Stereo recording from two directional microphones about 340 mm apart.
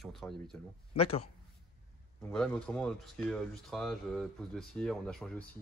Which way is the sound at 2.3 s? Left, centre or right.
Centre.